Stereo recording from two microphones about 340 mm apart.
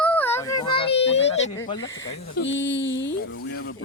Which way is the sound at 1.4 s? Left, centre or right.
Left.